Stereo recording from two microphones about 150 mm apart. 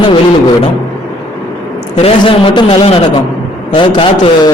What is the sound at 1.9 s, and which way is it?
A man's voice, 40° left (ahead or behind).